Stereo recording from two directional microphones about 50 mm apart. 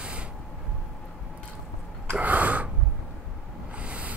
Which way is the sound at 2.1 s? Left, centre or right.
Right.